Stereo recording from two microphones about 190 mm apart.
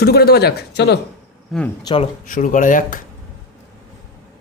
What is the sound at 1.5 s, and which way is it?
Speech, centre (ahead or behind).